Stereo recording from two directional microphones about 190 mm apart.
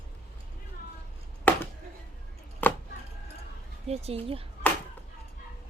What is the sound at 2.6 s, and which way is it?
Chopping, 10° left (ahead or behind).